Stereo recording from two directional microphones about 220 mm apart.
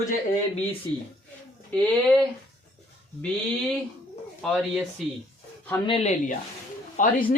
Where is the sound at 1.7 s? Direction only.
5° left (ahead or behind).